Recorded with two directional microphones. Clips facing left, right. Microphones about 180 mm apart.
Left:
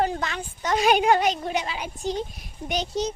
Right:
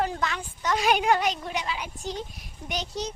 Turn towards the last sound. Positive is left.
turn(degrees=25)  # may be behind; listen again after turning